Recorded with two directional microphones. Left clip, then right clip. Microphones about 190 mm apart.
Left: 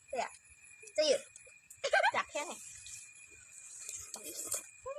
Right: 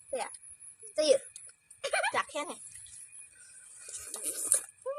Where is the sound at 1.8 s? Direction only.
10° right (ahead or behind).